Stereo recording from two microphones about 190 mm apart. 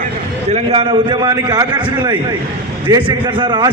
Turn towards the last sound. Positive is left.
turn(degrees=-25)  # may be behind; listen again after turning